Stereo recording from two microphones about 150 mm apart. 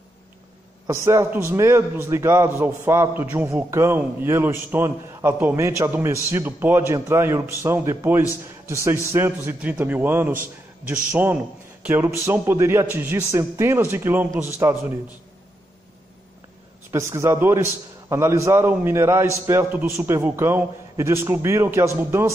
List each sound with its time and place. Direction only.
0.8 s a man's voice: 20° right (ahead or behind)
16.9 s a man's voice: 20° right (ahead or behind)